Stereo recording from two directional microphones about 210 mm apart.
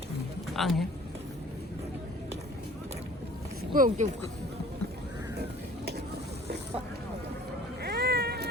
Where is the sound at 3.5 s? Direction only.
40° right (ahead or behind).